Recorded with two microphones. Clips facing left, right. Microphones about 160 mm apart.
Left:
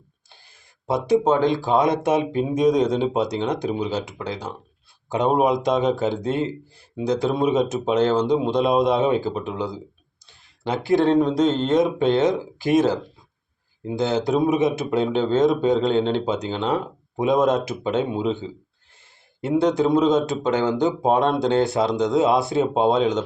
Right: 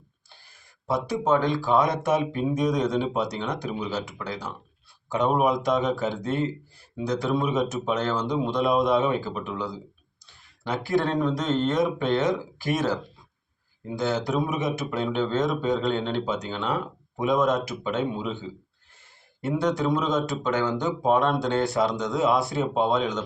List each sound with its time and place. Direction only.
0.9 s speech: 20° left (ahead or behind)
19.4 s speech: 25° left (ahead or behind)